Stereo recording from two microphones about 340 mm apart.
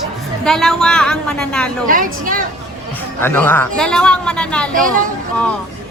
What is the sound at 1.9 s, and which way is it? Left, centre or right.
Speech, right.